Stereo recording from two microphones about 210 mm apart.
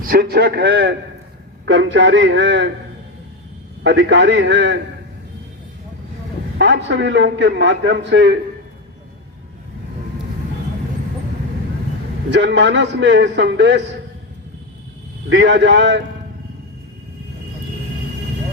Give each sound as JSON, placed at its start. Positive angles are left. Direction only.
{"t": 0.0, "sound": "a man's voice", "side_deg": -45}
{"t": 3.8, "sound": "a man's voice", "side_deg": -55}
{"t": 6.6, "sound": "a man's voice", "side_deg": -60}
{"t": 12.3, "sound": "a man's voice", "side_deg": -55}
{"t": 15.3, "sound": "a man's voice", "side_deg": -55}